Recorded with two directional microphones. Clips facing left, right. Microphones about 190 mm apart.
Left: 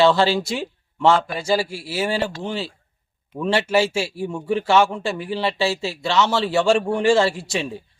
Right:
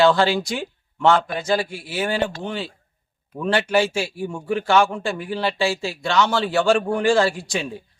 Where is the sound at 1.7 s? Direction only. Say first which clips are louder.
Left 2 dB; 30° left (ahead or behind).